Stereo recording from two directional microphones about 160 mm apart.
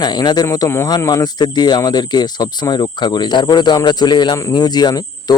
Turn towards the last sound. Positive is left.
turn(degrees=25)  # may be behind; listen again after turning